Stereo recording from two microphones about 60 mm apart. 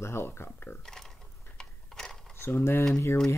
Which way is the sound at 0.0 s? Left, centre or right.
Left.